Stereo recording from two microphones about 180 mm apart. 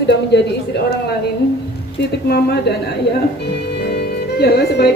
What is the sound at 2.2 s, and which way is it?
Speech, 65° left (ahead or behind).